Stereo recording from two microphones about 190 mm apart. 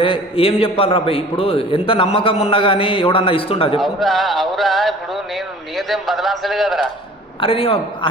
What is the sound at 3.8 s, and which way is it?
A man's voice, centre (ahead or behind).